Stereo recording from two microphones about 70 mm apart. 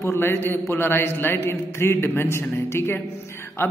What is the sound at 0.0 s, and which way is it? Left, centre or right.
A man's voice, left.